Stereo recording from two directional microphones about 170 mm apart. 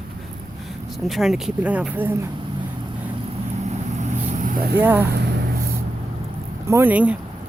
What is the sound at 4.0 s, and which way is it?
Vehicle, 50° right (ahead or behind).